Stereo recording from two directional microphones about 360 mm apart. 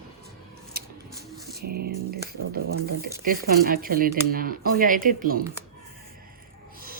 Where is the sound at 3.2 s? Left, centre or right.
Right.